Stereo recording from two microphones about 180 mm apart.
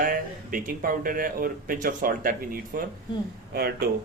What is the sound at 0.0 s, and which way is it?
Speech, 50° right (ahead or behind).